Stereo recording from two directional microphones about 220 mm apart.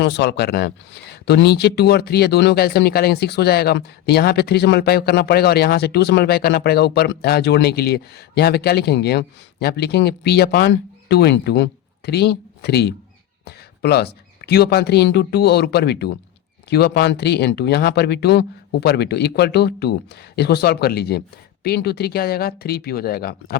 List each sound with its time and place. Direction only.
0.0 s speech: 50° left (ahead or behind)